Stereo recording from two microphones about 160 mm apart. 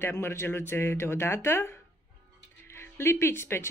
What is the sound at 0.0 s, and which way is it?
Speech, 15° left (ahead or behind).